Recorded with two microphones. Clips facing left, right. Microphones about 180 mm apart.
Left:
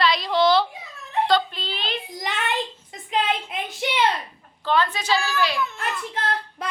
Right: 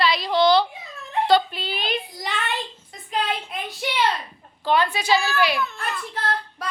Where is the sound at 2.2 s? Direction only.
15° left (ahead or behind).